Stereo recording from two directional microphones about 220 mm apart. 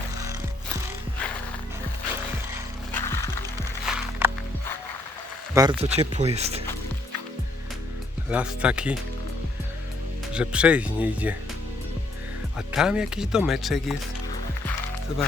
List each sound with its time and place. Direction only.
2.9 s music: 10° left (ahead or behind)
3.8 s music: 5° right (ahead or behind)
5.5 s speech: 20° right (ahead or behind)
8.3 s speech: 5° right (ahead or behind)
10.3 s speech: 5° right (ahead or behind)
12.5 s speech: 5° right (ahead or behind)